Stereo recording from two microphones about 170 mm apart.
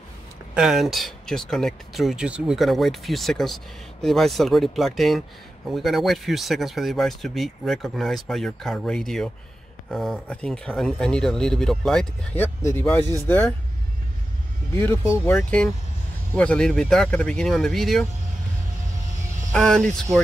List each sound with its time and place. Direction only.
0.6 s speech: centre (ahead or behind); by 13.0 s 15° left (ahead or behind)
13.0 s speech: 20° right (ahead or behind)
14.8 s speech: 15° left (ahead or behind)
15.3 s speech: 5° left (ahead or behind)
19.5 s speech: 5° left (ahead or behind)